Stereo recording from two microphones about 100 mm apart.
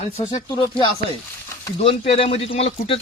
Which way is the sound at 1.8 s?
75° left (ahead or behind).